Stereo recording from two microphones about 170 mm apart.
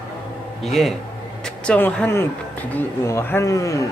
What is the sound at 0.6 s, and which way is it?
Speech, centre (ahead or behind).